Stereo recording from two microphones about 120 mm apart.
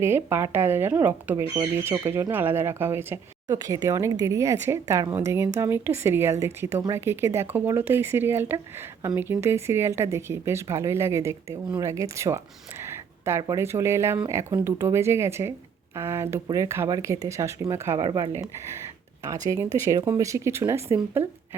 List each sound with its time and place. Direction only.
0.0 s speech: 20° right (ahead or behind)
3.5 s speech: 30° right (ahead or behind)
18.0 s speech: 35° right (ahead or behind)
18.3 s speech: 20° right (ahead or behind)